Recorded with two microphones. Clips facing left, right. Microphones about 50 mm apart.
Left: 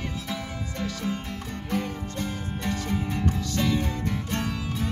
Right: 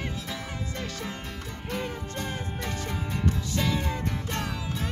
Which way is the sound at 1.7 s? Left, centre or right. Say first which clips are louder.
Left 3 dB; right.